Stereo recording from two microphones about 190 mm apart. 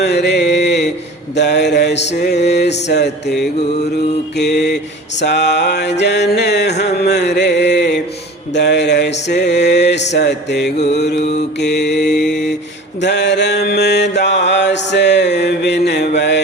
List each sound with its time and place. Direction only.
0.0 s mantra: 65° left (ahead or behind)
4.4 s mantra: 60° left (ahead or behind)
12.1 s mantra: 5° left (ahead or behind)
13.0 s mantra: 65° left (ahead or behind)